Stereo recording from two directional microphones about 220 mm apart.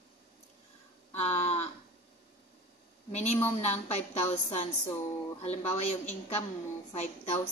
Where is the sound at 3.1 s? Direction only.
30° left (ahead or behind).